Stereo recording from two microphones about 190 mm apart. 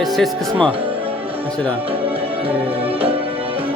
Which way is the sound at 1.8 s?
30° right (ahead or behind).